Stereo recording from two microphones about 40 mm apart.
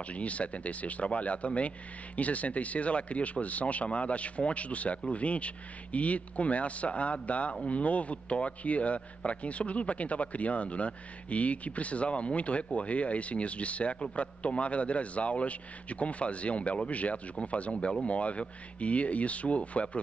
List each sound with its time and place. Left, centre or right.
0.1 s speech: left